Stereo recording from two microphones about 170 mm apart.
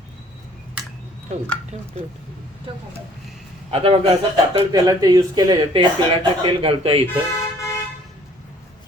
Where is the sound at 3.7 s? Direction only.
35° right (ahead or behind).